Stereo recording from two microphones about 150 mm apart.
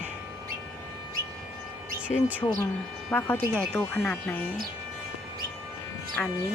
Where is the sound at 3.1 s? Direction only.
10° left (ahead or behind).